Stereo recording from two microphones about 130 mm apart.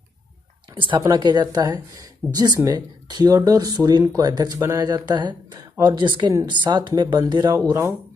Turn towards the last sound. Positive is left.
turn(degrees=-30)  # may be behind; listen again after turning